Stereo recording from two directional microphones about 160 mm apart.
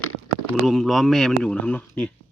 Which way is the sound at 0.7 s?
Centre (ahead or behind).